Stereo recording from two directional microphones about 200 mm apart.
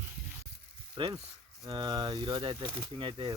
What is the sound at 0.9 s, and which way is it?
Speech, 20° right (ahead or behind).